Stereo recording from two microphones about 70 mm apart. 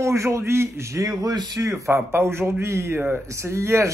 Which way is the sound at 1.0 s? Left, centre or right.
Right.